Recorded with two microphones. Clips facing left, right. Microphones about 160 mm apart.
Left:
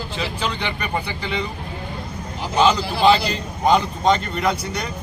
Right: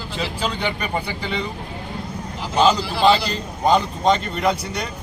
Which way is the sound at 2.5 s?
Centre (ahead or behind).